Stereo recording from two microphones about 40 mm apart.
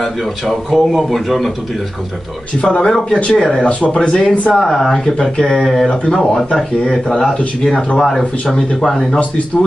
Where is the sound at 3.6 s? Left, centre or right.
Left.